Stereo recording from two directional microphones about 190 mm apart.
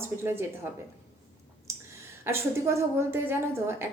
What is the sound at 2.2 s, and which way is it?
A woman's voice, 15° right (ahead or behind).